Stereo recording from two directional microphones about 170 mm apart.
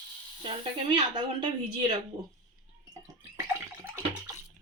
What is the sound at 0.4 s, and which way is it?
Speech, 30° right (ahead or behind).